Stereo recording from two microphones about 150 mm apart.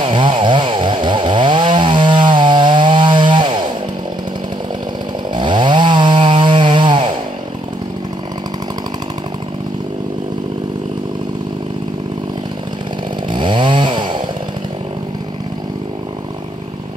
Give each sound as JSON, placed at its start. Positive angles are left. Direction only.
{"t": 0.0, "sound": "chainsaw", "side_deg": -35}
{"t": 5.3, "sound": "chainsaw", "side_deg": -30}
{"t": 13.3, "sound": "chainsaw", "side_deg": -30}